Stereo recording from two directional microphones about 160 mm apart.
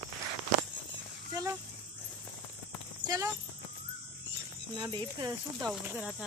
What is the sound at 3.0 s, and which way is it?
Speech, 20° right (ahead or behind).